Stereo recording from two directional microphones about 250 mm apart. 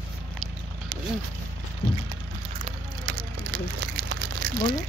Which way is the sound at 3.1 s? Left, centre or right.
Right.